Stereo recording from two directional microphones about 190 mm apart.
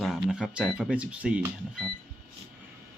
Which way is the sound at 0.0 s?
Centre (ahead or behind).